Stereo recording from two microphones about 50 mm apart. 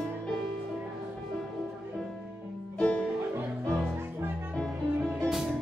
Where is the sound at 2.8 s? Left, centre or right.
Left.